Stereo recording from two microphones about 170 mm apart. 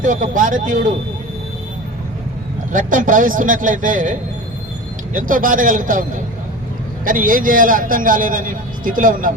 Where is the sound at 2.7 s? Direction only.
50° right (ahead or behind).